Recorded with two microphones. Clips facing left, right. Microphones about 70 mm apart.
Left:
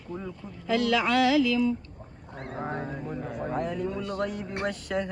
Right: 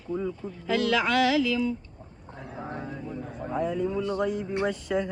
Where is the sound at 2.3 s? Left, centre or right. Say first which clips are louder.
Left 3 dB; left.